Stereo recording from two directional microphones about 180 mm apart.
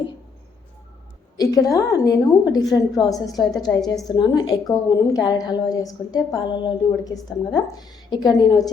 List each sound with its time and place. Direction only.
1.4 s a woman's voice: 20° left (ahead or behind)